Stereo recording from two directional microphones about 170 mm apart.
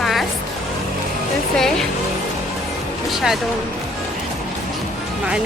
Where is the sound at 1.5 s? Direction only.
Centre (ahead or behind).